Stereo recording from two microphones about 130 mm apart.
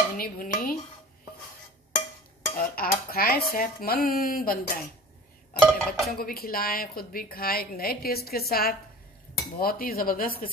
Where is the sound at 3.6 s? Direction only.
90° left.